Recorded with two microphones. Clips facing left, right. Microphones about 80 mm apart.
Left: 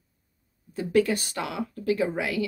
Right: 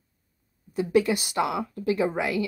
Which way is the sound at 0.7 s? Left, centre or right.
Centre.